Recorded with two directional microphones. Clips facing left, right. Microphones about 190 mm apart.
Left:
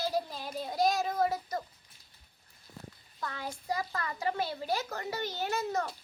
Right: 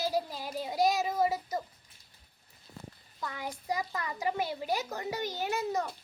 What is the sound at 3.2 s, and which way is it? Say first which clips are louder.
A child's voice: even; 15° right (ahead or behind).